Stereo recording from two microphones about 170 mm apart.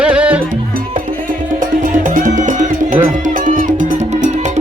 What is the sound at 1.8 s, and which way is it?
Music, 50° right (ahead or behind).